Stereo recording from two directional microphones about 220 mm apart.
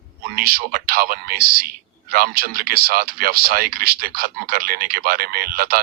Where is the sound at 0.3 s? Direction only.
40° right (ahead or behind).